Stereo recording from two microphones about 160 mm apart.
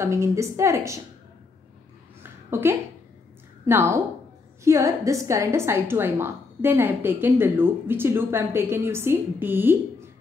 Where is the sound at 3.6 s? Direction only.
15° right (ahead or behind).